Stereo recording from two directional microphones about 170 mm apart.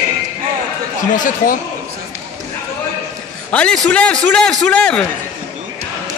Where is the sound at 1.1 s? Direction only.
50° left (ahead or behind).